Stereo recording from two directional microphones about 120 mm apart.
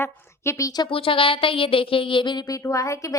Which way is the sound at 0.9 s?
50° left (ahead or behind).